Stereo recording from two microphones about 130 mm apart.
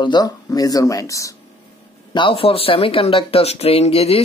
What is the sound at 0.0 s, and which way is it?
Speech, 30° left (ahead or behind).